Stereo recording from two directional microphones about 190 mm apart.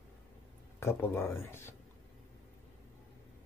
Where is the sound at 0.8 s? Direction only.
15° left (ahead or behind).